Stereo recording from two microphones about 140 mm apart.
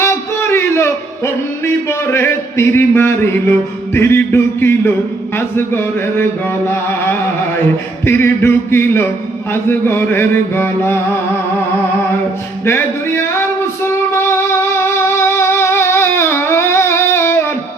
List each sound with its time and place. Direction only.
0.0 s speech: 20° left (ahead or behind)
12.6 s a sound: 20° left (ahead or behind)
13.8 s music: 20° left (ahead or behind)